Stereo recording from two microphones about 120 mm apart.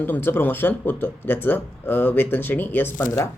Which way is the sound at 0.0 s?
15° left (ahead or behind).